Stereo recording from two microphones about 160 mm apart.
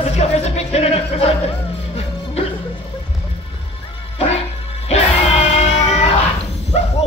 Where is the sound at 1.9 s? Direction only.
40° left (ahead or behind).